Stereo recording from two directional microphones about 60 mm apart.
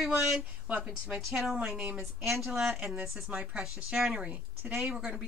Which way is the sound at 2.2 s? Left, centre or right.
Centre.